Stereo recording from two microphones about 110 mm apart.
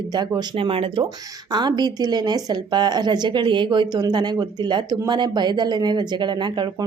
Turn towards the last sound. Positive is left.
turn(degrees=-45)  # may be behind; listen again after turning